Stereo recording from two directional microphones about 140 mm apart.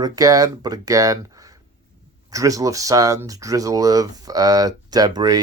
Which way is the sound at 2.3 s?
25° right (ahead or behind).